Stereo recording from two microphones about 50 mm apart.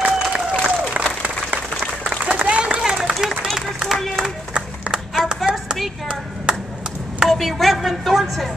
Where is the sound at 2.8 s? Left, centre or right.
Centre.